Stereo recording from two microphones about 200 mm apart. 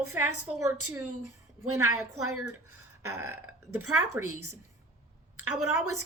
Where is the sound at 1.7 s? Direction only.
90° right.